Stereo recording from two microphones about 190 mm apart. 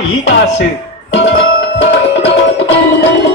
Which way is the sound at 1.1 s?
70° left (ahead or behind).